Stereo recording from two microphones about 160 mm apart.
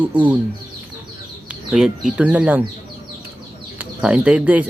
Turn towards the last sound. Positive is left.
turn(degrees=-10)  # may be behind; listen again after turning